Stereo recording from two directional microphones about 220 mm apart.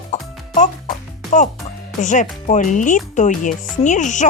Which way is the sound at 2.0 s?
35° left (ahead or behind).